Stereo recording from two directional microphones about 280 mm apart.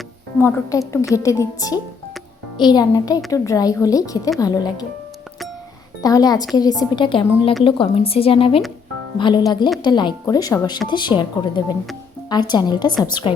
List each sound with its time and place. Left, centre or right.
0.3 s a woman's voice: centre
6.0 s a woman's voice: centre